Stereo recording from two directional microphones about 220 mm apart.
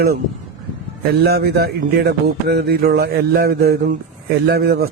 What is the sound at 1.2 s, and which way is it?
Speech, 45° right (ahead or behind).